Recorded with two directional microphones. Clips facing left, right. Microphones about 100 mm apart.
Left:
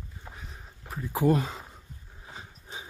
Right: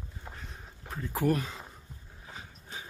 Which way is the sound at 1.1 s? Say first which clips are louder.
Left 4 dB; 25° left (ahead or behind).